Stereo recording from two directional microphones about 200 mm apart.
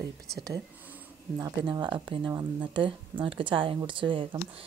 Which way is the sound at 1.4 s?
20° right (ahead or behind).